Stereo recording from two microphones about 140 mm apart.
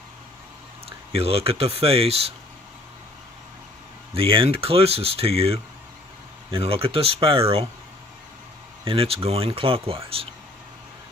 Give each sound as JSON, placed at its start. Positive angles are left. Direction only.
{"t": 0.8, "sound": "speech", "side_deg": -45}
{"t": 4.1, "sound": "speech", "side_deg": -40}
{"t": 8.8, "sound": "speech", "side_deg": -40}